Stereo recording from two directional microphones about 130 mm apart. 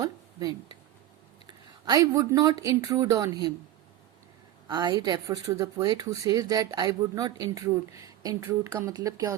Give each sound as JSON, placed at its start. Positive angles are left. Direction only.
{"t": 0.0, "sound": "a sound", "side_deg": -30}
{"t": 1.8, "sound": "speech", "side_deg": -30}
{"t": 4.7, "sound": "a woman's voice", "side_deg": -35}